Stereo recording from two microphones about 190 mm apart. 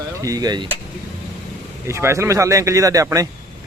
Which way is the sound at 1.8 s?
15° right (ahead or behind).